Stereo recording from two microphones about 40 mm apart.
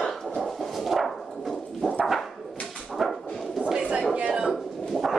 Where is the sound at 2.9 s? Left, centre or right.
Centre.